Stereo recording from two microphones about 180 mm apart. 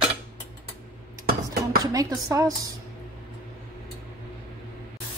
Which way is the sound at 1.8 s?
20° right (ahead or behind).